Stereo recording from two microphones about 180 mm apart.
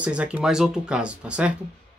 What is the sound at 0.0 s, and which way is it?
Speech, 5° right (ahead or behind).